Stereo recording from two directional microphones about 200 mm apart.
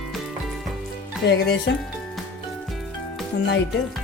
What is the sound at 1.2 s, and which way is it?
Speech, 60° left (ahead or behind).